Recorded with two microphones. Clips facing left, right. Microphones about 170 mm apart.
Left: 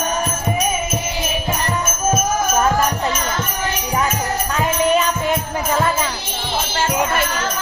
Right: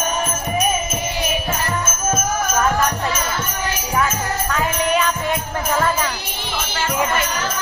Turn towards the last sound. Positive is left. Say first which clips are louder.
# left 1 dB
turn(degrees=10)  # may be behind; listen again after turning